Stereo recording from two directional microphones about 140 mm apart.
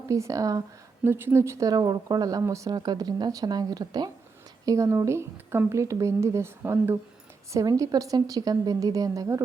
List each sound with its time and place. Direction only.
0.1 s speech: 25° right (ahead or behind)